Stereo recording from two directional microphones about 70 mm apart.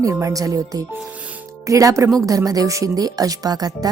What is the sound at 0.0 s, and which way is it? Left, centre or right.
Speech, right.